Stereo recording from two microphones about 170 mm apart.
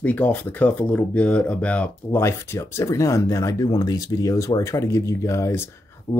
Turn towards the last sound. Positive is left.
turn(degrees=15)  # may be behind; listen again after turning